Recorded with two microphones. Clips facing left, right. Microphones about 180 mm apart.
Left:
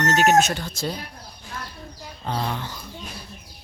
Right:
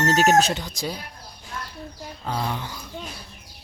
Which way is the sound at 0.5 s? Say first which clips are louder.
Left 1 dB; 15° right (ahead or behind).